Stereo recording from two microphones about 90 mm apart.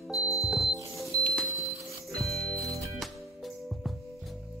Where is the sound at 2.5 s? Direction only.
35° right (ahead or behind).